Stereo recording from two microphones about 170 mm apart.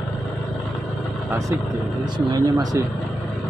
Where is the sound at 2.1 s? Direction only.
20° right (ahead or behind).